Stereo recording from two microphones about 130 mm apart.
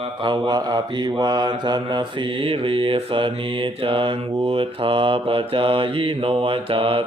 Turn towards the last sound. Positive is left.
turn(degrees=-45)  # may be behind; listen again after turning